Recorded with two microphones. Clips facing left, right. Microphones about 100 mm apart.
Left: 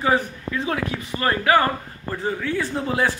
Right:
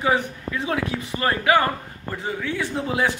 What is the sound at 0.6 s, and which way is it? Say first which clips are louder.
A man's voice: right 3 dB; 20° right (ahead or behind).